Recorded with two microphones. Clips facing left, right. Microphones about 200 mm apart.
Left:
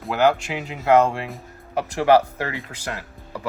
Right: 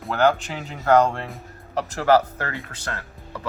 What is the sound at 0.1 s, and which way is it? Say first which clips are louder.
Speech: left 1 dB; 10° left (ahead or behind).